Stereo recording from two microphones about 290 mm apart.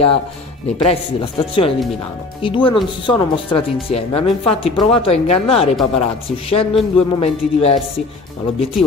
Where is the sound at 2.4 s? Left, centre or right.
Centre.